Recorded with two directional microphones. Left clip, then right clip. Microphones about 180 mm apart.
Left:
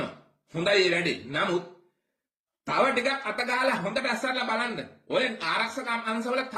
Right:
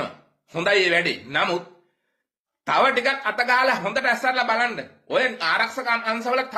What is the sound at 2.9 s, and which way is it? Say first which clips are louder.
A man's voice: right 6 dB; 15° left (ahead or behind).